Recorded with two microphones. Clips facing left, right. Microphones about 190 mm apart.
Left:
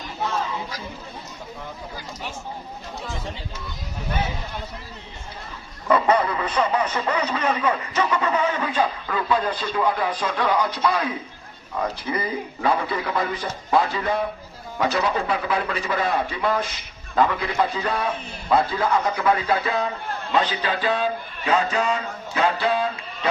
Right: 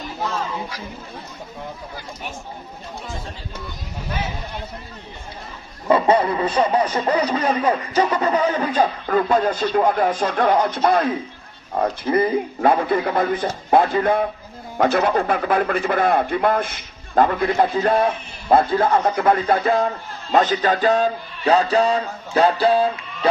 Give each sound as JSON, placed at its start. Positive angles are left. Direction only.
{"t": 5.9, "sound": "speech", "side_deg": -30}